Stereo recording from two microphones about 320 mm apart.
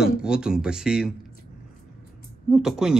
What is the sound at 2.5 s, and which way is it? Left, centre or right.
Speech, centre.